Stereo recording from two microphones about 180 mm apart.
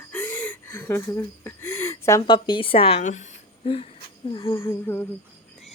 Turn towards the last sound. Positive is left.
turn(degrees=10)  # may be behind; listen again after turning